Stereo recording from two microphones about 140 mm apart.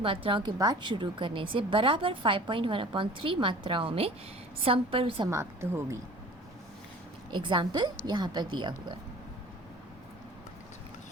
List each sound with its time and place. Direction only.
0.0 s a woman's voice: 40° right (ahead or behind)
5.3 s speech: 20° right (ahead or behind)
7.3 s a woman's voice: 35° right (ahead or behind)